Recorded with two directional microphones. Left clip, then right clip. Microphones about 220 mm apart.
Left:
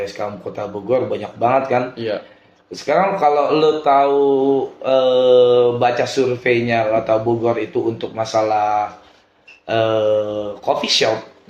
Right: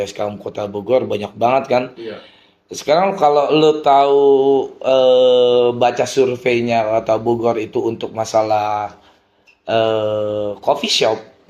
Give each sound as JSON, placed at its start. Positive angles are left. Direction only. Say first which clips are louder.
{"t": 0.0, "sound": "speech", "louder": "right 2 dB", "side_deg": -35}